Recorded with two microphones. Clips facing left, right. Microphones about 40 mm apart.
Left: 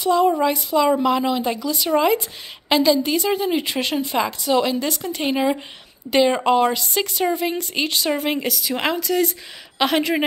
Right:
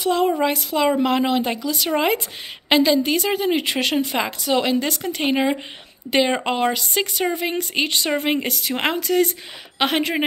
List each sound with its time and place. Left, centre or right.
0.0 s speech: right
0.7 s speech: centre
1.0 s speech: right
9.0 s speech: right